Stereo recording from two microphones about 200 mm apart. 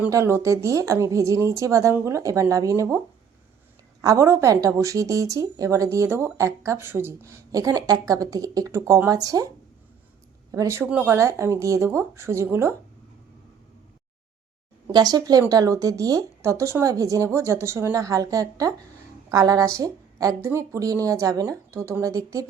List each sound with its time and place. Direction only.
0.0 s speech: 15° right (ahead or behind)
4.0 s speech: 15° right (ahead or behind)
10.5 s speech: 15° right (ahead or behind)
14.9 s speech: 20° right (ahead or behind)